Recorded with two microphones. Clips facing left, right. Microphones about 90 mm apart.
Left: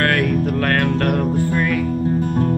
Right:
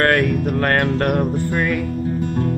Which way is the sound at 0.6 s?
25° right (ahead or behind).